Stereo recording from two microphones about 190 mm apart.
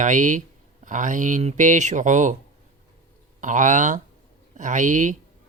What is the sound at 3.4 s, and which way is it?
Speech, 40° right (ahead or behind).